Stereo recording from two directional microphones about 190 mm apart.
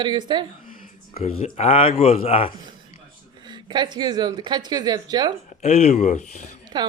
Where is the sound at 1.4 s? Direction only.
30° left (ahead or behind).